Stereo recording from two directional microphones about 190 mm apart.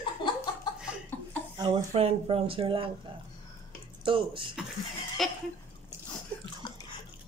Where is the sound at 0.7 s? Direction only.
20° left (ahead or behind).